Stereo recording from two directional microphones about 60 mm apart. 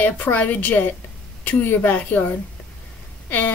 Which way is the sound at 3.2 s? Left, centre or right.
Left.